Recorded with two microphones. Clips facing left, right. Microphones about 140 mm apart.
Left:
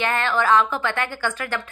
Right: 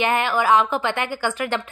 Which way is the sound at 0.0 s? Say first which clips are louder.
Right 2 dB; 15° right (ahead or behind).